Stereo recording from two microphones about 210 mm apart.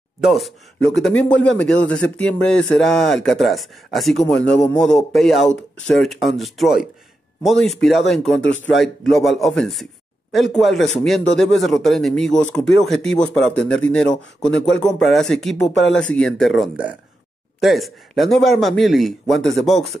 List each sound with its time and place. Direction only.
0.2 s speech: centre (ahead or behind)